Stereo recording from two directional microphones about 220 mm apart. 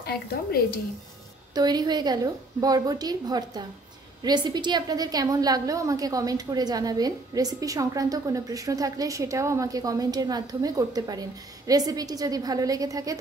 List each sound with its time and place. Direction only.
0.0 s speech: 45° left (ahead or behind)
1.5 s a woman's voice: 20° right (ahead or behind)